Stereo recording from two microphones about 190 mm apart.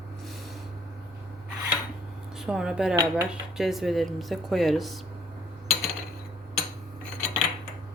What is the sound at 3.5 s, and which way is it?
Speech, centre (ahead or behind).